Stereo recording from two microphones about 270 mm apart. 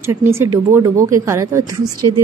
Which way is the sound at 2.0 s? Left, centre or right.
Right.